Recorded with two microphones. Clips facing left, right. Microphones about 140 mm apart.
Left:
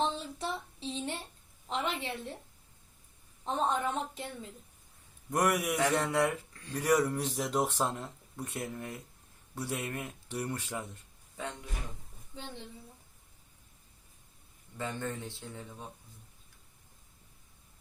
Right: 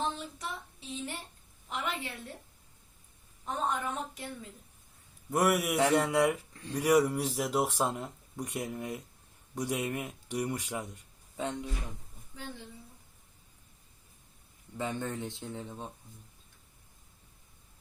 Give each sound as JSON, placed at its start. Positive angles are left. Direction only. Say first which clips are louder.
{"t": 0.1, "sound": "a sound", "louder": "left 3 dB", "side_deg": 30}
{"t": 1.7, "sound": "a woman's voice", "louder": "left 2 dB", "side_deg": 25}
{"t": 3.4, "sound": "a woman's voice", "louder": "left 2 dB", "side_deg": 25}
{"t": 5.3, "sound": "speech", "louder": "right 2 dB", "side_deg": -5}
{"t": 6.7, "sound": "speech", "louder": "right 2 dB", "side_deg": -10}
{"t": 14.8, "sound": "speech", "louder": "right 2 dB", "side_deg": -20}